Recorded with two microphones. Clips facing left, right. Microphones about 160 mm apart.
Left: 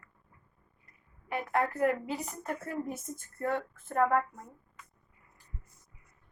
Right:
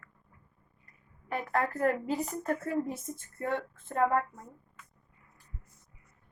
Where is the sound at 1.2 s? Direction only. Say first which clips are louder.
Even; 40° right (ahead or behind).